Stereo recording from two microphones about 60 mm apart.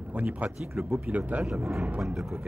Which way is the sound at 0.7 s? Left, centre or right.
Right.